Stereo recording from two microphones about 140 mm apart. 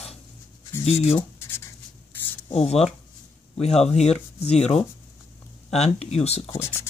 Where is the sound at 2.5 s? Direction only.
50° left (ahead or behind).